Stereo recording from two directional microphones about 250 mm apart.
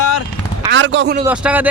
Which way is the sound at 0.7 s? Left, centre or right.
Right.